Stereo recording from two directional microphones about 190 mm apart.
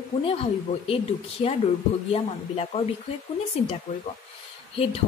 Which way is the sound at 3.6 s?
35° left (ahead or behind).